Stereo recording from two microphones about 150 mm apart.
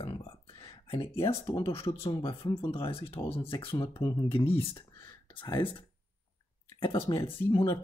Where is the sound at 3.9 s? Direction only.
20° left (ahead or behind).